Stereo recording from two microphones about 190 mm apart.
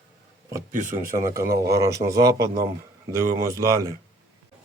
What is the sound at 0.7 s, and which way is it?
Speech, 45° right (ahead or behind).